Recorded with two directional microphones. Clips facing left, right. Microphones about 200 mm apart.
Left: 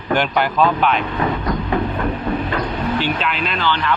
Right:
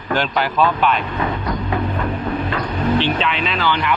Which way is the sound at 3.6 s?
10° right (ahead or behind).